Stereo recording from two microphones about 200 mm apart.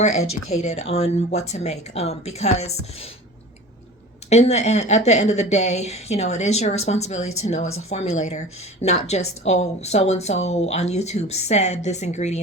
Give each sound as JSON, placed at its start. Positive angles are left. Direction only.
{"t": 0.0, "sound": "speech", "side_deg": 35}
{"t": 4.3, "sound": "speech", "side_deg": 35}